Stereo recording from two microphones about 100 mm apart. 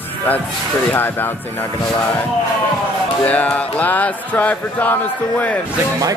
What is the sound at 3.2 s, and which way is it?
Music, 15° left (ahead or behind).